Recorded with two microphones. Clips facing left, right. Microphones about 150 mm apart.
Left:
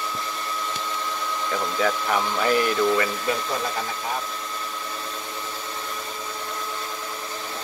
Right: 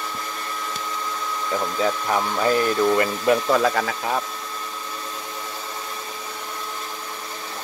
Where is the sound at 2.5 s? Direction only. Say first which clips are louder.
Right 1 dB; 35° right (ahead or behind).